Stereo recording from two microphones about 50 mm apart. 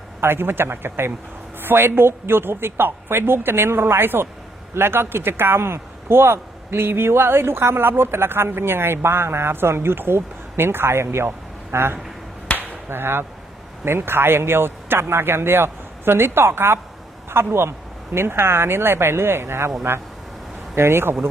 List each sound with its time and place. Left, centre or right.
0.2 s a man's voice: right
12.5 s a sound: right
13.8 s a man's voice: right